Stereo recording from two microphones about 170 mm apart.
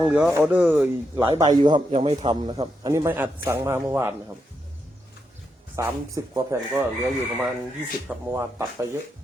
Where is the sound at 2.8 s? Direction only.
20° right (ahead or behind).